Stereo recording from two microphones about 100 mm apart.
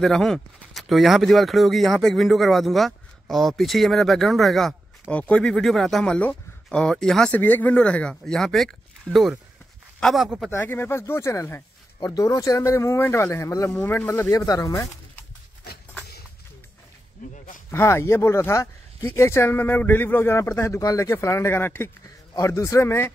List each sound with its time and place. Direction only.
0.0 s speech: 5° left (ahead or behind)
5.1 s speech: 10° left (ahead or behind)
7.3 s speech: 20° left (ahead or behind); by 10.5 s centre (ahead or behind)
10.5 s speech: 20° left (ahead or behind)
13.7 s speech: 20° left (ahead or behind)
14.3 s speech: 35° left (ahead or behind)
17.6 s speech: 25° left (ahead or behind)